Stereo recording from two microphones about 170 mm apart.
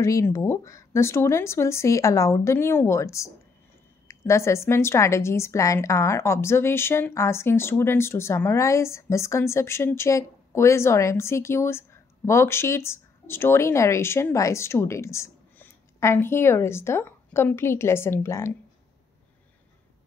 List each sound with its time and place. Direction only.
0.0 s a woman's voice: 20° left (ahead or behind)